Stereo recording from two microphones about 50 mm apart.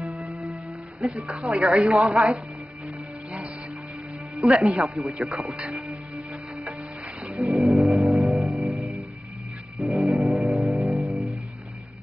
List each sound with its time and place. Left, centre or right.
0.0 s music: centre
1.2 s speech: right
1.8 s speech: centre
2.0 s speech: right
4.5 s speech: centre
5.2 s speech: right
5.8 s music: centre
7.3 s music: centre